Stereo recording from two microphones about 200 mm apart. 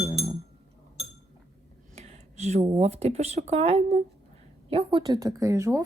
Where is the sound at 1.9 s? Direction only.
30° right (ahead or behind).